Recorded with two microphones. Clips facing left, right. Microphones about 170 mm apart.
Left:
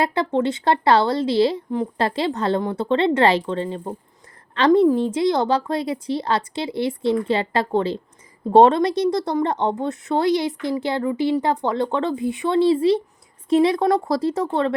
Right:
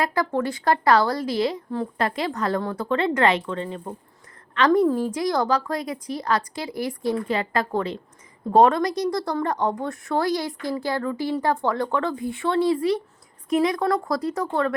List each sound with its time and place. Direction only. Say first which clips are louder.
0.0 s speech: left 3 dB; 25° left (ahead or behind)